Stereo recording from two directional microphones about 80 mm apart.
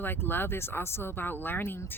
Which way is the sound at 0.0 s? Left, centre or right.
Left.